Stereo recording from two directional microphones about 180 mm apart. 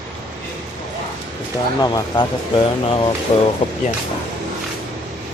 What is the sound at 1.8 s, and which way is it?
Speech, 20° left (ahead or behind).